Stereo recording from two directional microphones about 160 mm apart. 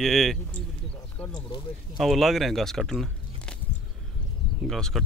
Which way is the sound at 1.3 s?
30° left (ahead or behind).